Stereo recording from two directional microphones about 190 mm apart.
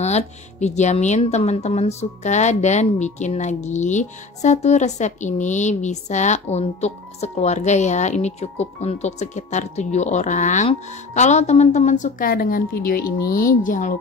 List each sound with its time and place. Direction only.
0.0 s speech: 35° left (ahead or behind)